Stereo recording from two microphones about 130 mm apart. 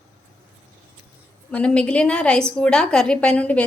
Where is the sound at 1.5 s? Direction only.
10° left (ahead or behind).